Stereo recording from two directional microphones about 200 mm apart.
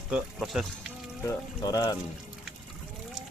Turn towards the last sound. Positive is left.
turn(degrees=20)  # may be behind; listen again after turning